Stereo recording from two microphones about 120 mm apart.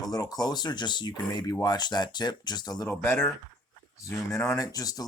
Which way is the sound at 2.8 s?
20° left (ahead or behind).